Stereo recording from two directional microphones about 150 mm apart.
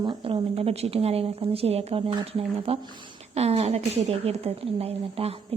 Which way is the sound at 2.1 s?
30° right (ahead or behind).